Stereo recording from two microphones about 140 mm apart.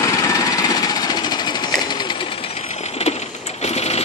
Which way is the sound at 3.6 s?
50° left (ahead or behind).